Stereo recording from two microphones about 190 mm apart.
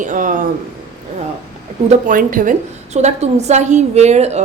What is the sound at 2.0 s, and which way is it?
A woman's voice, 45° right (ahead or behind).